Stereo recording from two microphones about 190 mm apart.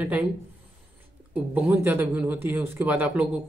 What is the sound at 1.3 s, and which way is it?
Speech, 10° right (ahead or behind).